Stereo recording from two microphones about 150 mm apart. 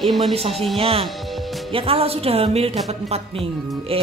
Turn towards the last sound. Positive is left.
turn(degrees=-40)  # may be behind; listen again after turning